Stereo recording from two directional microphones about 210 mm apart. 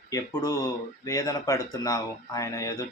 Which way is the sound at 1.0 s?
15° left (ahead or behind).